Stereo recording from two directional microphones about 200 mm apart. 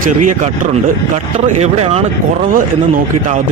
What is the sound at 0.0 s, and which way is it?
Speech, 40° right (ahead or behind).